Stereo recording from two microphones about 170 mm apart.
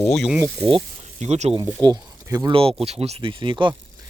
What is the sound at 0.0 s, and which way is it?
Speech, 5° left (ahead or behind).